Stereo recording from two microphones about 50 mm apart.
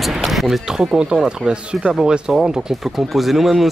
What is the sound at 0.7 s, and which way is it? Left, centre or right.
Speech, centre.